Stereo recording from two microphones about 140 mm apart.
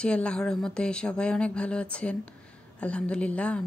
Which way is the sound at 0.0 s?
5° left (ahead or behind).